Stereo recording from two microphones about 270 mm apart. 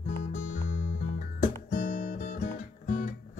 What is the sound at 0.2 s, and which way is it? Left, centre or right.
Music, left.